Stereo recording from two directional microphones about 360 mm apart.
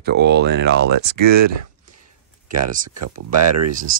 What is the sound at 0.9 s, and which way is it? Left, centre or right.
Speech, right.